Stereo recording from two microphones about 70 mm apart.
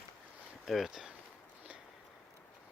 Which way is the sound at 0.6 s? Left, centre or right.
Centre.